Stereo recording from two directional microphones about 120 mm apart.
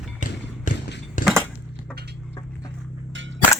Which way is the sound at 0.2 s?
90° left.